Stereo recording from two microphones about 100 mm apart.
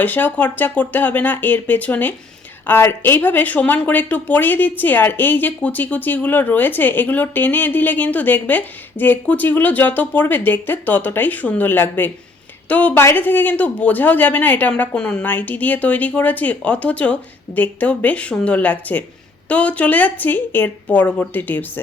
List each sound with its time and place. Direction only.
0.0 s speech: 20° left (ahead or behind)